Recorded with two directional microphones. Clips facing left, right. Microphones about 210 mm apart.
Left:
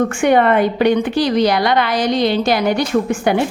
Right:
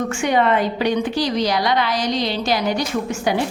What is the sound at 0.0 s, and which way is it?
A woman's voice, 55° left (ahead or behind).